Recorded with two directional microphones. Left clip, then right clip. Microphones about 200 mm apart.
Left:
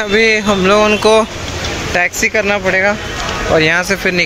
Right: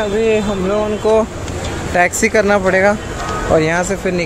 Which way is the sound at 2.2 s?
15° right (ahead or behind).